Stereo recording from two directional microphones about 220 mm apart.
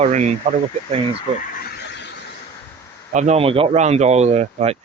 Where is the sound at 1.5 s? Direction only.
45° left (ahead or behind).